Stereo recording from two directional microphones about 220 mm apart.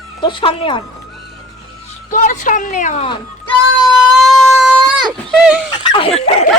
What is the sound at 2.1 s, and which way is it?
Speech, 35° left (ahead or behind).